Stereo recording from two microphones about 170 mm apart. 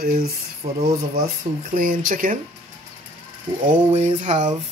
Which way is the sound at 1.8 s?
55° right (ahead or behind).